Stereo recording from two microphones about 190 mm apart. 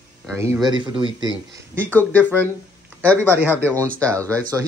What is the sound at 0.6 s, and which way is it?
Speech, 25° right (ahead or behind).